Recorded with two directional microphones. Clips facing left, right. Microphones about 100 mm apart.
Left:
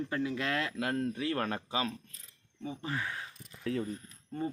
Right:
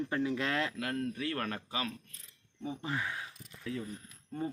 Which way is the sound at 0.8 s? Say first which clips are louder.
Left 3 dB; 30° left (ahead or behind).